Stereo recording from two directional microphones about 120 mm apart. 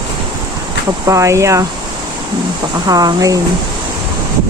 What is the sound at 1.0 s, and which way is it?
Speech, 25° right (ahead or behind).